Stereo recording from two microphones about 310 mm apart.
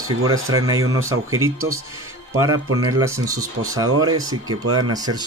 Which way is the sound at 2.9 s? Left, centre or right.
Centre.